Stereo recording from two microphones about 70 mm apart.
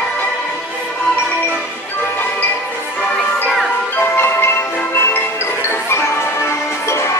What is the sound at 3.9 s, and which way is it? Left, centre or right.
Music, left.